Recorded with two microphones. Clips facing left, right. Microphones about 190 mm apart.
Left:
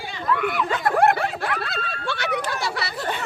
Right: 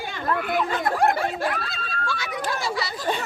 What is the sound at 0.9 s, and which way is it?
Snicker, 65° left (ahead or behind).